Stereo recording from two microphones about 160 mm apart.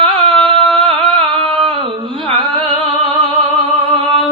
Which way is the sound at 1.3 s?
35° right (ahead or behind).